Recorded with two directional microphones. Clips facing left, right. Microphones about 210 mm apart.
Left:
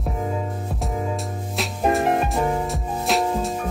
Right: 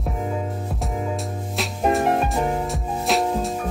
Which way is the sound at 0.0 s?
Centre (ahead or behind).